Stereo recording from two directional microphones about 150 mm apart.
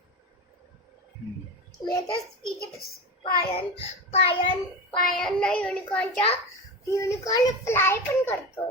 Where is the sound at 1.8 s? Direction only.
30° left (ahead or behind).